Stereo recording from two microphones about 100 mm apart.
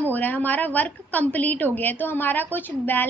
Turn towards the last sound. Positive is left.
turn(degrees=20)  # may be behind; listen again after turning